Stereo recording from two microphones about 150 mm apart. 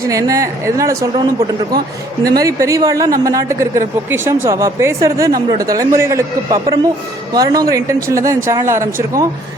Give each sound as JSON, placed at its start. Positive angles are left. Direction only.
{"t": 0.1, "sound": "a woman's voice", "side_deg": -20}